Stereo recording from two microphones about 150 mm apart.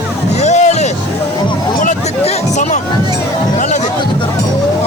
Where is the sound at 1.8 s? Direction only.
55° left (ahead or behind).